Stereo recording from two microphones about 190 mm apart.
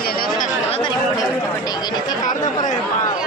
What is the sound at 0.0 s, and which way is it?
Chatter, 50° left (ahead or behind).